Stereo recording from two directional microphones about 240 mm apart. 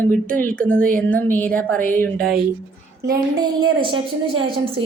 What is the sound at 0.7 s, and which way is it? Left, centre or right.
Speech, right.